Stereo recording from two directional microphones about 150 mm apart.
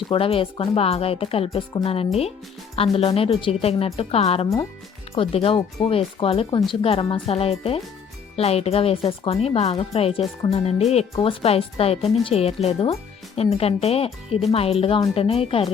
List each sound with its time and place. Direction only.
0.1 s speech: 40° left (ahead or behind)